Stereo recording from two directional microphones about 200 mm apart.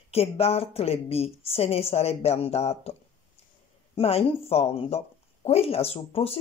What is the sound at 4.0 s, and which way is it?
Speech, 30° left (ahead or behind).